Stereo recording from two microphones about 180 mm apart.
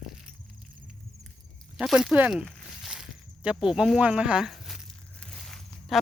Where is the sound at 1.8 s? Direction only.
Centre (ahead or behind).